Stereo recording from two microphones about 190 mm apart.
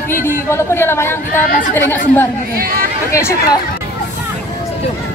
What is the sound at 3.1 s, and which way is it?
Speech, 15° left (ahead or behind).